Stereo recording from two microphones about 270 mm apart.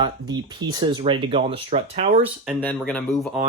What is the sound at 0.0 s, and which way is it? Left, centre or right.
Speech, centre.